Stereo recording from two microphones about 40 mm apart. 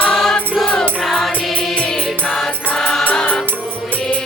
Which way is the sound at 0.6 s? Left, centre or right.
Left.